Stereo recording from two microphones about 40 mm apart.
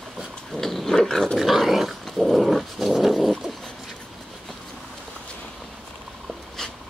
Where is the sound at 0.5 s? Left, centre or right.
Centre.